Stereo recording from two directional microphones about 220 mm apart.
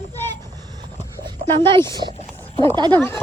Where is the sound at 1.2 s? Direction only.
20° right (ahead or behind).